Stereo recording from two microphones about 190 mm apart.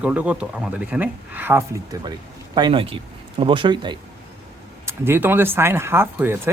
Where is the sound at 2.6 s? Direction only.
25° right (ahead or behind).